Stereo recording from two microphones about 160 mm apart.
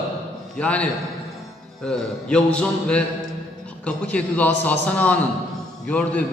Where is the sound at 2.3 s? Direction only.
5° left (ahead or behind).